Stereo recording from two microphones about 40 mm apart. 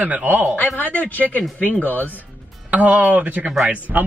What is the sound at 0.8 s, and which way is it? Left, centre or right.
Speech, left.